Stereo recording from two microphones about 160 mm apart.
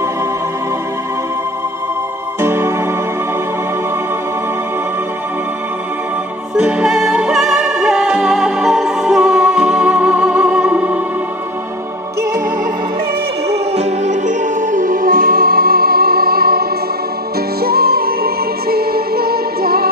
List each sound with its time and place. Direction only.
2.4 s music: 15° right (ahead or behind)
6.5 s music: 5° right (ahead or behind)
13.5 s music: 45° right (ahead or behind); by 19.9 s 70° right (ahead or behind)